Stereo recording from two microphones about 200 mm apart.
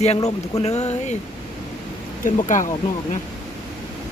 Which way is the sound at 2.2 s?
40° left (ahead or behind).